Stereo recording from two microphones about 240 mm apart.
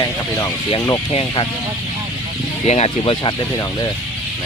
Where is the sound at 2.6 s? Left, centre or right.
Left.